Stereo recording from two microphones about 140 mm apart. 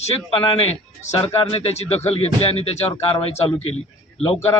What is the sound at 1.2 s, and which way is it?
Speech, 45° left (ahead or behind).